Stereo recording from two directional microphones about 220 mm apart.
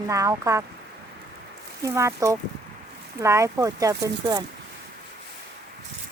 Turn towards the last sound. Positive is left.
turn(degrees=-15)  # may be behind; listen again after turning